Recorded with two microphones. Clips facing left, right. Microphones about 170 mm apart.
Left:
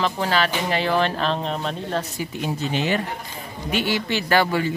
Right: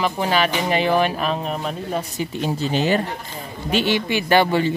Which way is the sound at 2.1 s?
30° right (ahead or behind).